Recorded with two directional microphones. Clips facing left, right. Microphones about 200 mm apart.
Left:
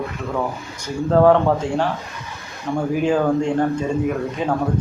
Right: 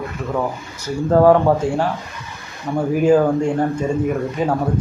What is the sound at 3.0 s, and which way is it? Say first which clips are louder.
A man's voice: right 5 dB; 5° right (ahead or behind).